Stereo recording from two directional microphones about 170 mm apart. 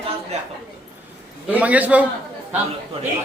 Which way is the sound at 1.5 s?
10° right (ahead or behind).